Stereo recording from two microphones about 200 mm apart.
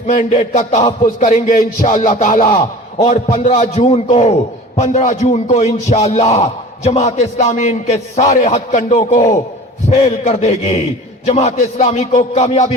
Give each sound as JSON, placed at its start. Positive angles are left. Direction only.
{"t": 0.1, "sound": "a man's voice", "side_deg": 40}